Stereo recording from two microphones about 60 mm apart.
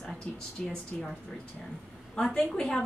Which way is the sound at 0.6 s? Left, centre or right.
Centre.